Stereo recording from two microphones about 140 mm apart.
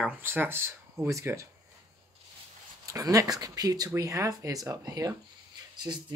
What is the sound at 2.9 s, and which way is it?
Speech, 25° right (ahead or behind).